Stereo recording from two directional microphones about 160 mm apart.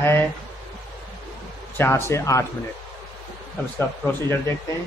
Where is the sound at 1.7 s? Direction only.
15° left (ahead or behind).